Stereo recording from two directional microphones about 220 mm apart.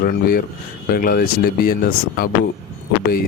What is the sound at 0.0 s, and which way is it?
Speech, 45° left (ahead or behind).